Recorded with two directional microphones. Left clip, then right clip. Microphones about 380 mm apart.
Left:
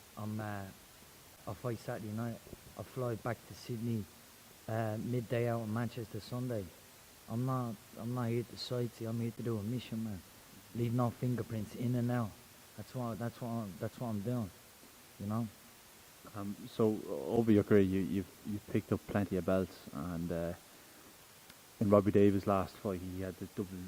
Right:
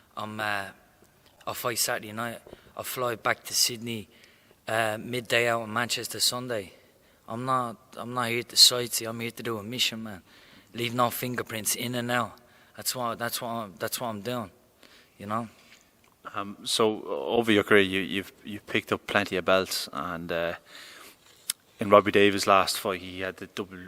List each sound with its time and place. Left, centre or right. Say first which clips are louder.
0.2 s speech: right 13 dB; centre
7.3 s speech: right 12 dB; centre
16.3 s speech: right 16 dB; centre
16.9 s speech: right 8 dB; centre
17.4 s speech: right 8 dB; centre